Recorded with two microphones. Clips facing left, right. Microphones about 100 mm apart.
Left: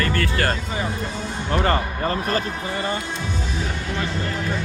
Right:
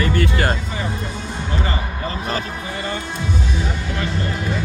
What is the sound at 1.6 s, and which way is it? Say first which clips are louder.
Speech: left 4 dB; 55° left (ahead or behind).